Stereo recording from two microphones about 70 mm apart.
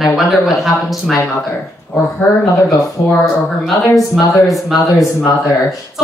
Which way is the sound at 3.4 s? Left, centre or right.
Centre.